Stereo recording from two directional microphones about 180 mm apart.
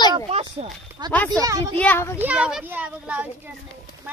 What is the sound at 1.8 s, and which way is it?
Speech, 10° left (ahead or behind).